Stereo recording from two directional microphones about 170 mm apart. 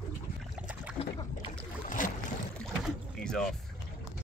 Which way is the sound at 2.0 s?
50° left (ahead or behind).